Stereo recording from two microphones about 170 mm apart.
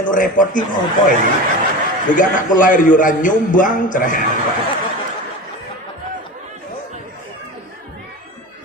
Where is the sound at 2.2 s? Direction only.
50° left (ahead or behind).